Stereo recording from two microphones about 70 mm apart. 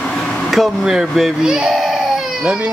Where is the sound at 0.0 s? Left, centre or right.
Centre.